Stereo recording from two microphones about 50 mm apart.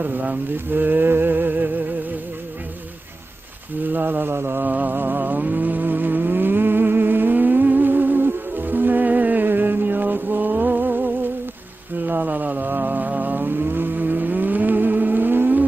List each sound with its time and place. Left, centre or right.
0.0 s a sound: right
3.8 s mantra: right
4.6 s vehicle: right